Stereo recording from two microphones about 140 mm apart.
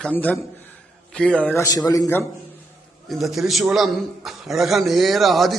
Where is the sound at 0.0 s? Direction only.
10° left (ahead or behind).